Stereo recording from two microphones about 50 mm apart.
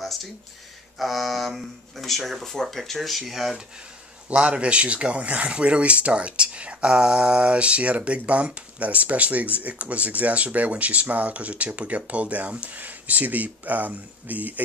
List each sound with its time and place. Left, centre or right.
0.9 s speech: centre
4.3 s speech: right